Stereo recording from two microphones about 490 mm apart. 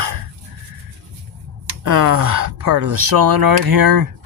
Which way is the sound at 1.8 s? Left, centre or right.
Right.